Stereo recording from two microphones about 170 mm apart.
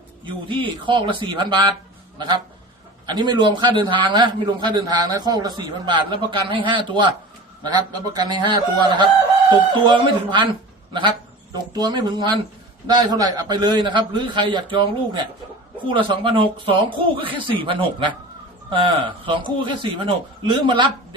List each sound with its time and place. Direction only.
0.4 s a man's voice: 30° right (ahead or behind)
11.7 s a man's voice: 25° right (ahead or behind)